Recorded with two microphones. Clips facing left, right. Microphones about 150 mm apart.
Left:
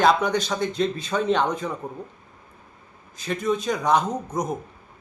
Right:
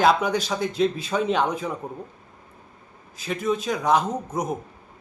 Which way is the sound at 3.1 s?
5° right (ahead or behind).